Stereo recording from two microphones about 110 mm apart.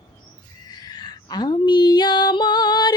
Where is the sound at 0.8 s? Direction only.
40° left (ahead or behind).